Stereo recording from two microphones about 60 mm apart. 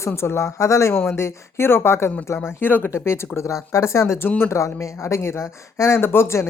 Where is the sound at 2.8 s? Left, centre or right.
Left.